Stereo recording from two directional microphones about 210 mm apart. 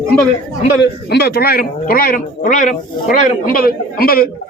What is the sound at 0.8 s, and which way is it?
Speech, 50° left (ahead or behind).